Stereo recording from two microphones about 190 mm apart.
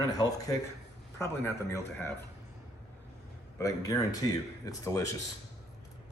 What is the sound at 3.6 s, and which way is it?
Speech, 20° left (ahead or behind).